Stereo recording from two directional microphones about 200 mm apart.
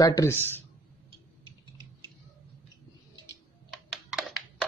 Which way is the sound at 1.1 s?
20° right (ahead or behind).